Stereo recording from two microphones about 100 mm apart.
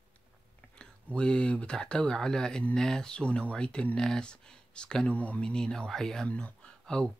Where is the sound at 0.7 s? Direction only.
10° left (ahead or behind).